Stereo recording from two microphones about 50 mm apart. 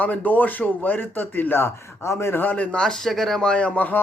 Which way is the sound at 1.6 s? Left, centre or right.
Left.